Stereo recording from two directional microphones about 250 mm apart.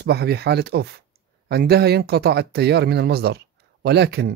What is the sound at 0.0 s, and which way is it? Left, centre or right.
Speech, right.